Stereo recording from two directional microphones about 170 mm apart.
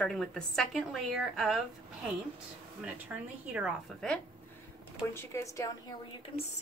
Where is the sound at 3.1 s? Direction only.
10° right (ahead or behind).